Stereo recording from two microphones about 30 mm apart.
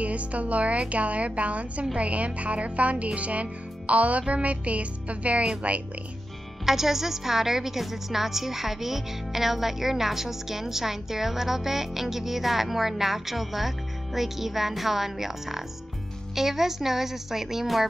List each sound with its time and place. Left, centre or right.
0.0 s a woman's voice: right
6.6 s a woman's voice: centre